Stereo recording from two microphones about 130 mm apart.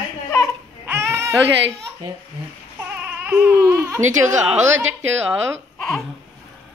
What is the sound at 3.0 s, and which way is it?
Speech, 15° right (ahead or behind).